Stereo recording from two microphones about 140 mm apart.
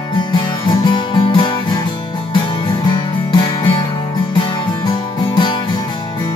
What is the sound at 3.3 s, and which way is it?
Music, 35° left (ahead or behind).